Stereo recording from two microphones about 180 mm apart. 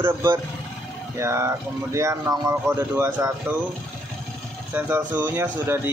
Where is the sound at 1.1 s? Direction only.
15° right (ahead or behind).